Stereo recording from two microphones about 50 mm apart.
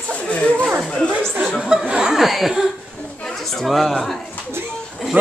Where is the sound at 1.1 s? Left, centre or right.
Right.